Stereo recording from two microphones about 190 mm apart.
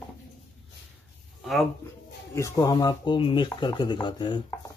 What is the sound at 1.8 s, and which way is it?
Speech, 15° left (ahead or behind).